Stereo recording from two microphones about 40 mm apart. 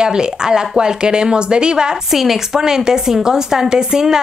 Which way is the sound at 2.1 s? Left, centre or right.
Centre.